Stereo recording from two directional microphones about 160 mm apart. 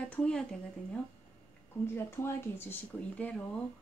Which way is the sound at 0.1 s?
5° left (ahead or behind).